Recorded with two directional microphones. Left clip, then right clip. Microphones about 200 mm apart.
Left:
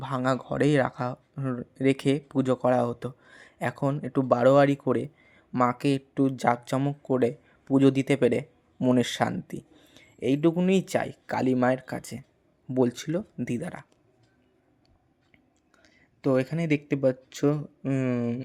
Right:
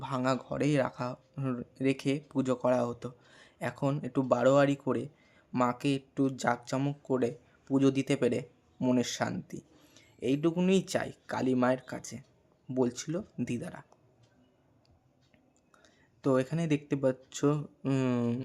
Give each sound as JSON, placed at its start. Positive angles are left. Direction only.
{"t": 0.0, "sound": "speech", "side_deg": 15}
{"t": 15.8, "sound": "speech", "side_deg": 10}
{"t": 17.8, "sound": "speech", "side_deg": 0}